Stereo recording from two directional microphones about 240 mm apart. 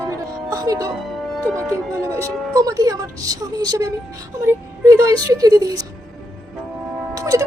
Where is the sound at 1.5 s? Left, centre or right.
Centre.